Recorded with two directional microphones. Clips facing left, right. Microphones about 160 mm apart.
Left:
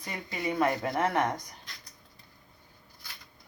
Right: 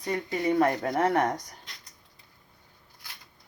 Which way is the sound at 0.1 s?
40° right (ahead or behind).